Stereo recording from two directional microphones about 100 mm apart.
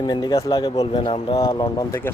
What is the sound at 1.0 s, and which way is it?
Speech, 60° left (ahead or behind).